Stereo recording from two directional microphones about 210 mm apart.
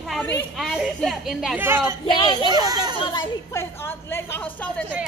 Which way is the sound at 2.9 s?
25° left (ahead or behind).